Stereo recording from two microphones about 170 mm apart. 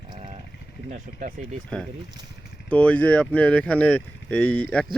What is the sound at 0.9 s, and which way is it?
Speech, 50° right (ahead or behind).